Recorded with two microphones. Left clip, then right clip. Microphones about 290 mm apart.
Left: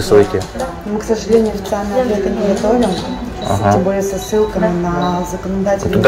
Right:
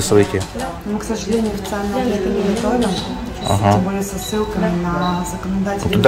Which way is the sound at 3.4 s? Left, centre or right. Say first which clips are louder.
Left 2 dB; right.